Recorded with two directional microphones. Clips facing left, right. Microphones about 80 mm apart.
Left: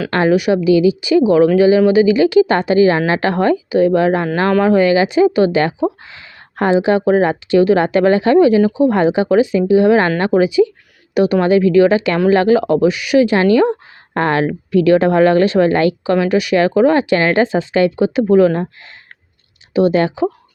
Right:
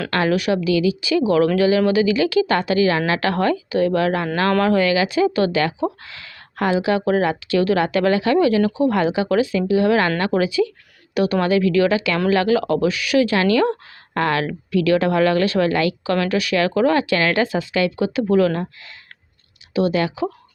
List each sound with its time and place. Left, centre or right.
0.1 s a woman's voice: left
16.1 s a woman's voice: centre
19.7 s speech: left